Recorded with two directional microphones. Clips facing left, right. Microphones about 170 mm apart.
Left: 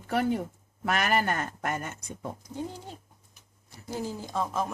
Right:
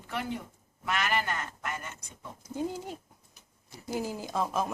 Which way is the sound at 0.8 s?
45° left (ahead or behind).